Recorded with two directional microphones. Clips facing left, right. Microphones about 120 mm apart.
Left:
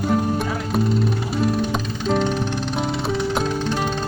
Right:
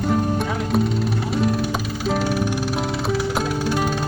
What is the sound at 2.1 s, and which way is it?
Music, 5° right (ahead or behind).